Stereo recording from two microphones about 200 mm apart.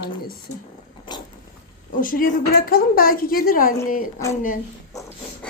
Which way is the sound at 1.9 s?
45° left (ahead or behind).